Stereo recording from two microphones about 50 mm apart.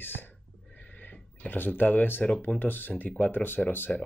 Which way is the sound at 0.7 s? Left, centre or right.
Left.